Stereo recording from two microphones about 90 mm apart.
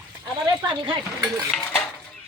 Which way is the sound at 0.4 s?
60° right (ahead or behind).